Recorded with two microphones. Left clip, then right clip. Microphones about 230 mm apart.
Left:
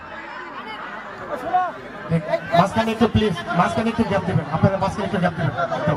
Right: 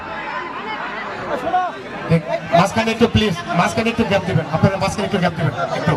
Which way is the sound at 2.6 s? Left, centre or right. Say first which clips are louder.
Right 3 dB; right.